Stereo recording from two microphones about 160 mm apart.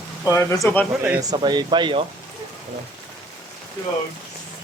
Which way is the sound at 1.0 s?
20° right (ahead or behind).